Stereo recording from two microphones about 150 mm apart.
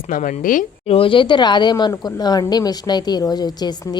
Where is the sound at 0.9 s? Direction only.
35° left (ahead or behind).